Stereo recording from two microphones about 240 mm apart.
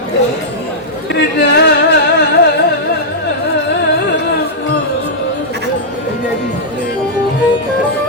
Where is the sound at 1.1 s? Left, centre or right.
Left.